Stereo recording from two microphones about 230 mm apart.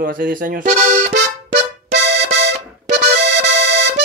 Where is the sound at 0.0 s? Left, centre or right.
Right.